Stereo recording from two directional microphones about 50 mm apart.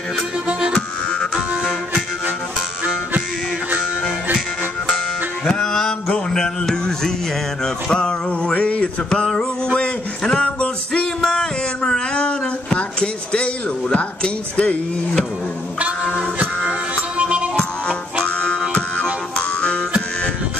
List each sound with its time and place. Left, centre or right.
0.5 s harmonica: centre
4.9 s music: centre
7.6 s speech: centre
9.1 s a sound: centre
16.9 s music: right
18.2 s music: left